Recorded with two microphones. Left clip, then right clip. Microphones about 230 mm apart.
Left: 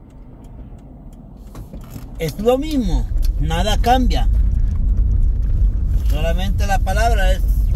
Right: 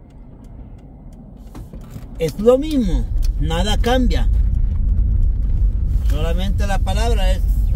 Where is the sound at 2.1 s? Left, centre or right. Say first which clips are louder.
Right 3 dB; centre.